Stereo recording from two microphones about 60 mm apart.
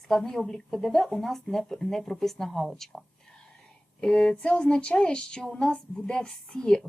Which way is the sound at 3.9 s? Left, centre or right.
Centre.